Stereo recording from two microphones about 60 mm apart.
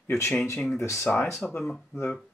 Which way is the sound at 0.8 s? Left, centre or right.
Left.